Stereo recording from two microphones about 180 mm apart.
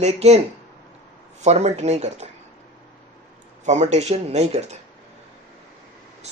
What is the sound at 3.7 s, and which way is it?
Speech, 40° right (ahead or behind).